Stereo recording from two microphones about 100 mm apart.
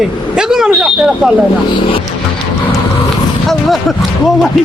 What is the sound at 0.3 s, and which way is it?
Speech, 5° right (ahead or behind).